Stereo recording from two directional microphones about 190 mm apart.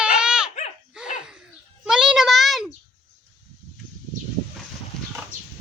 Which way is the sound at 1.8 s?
5° right (ahead or behind).